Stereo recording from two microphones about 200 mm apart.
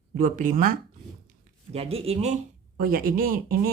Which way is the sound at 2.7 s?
45° right (ahead or behind).